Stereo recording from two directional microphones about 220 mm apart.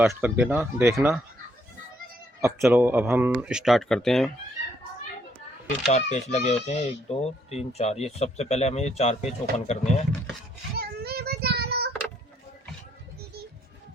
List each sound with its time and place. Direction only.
0.0 s speech: 10° right (ahead or behind)
2.4 s speech: 10° right (ahead or behind)
5.9 s speech: 30° left (ahead or behind)
10.8 s child singing: 45° right (ahead or behind)